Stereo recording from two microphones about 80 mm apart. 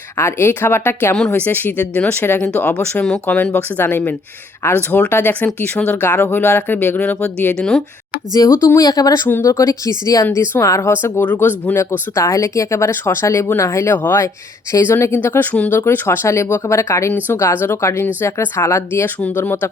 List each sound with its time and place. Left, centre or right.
0.2 s speech: left; by 3.2 s centre
3.5 s speech: left
6.0 s speech: left
7.6 s speech: centre
8.3 s speech: left
9.2 s speech: left
9.5 s speech: left
11.8 s speech: left